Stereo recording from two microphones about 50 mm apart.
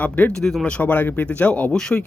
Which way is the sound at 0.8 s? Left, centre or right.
Left.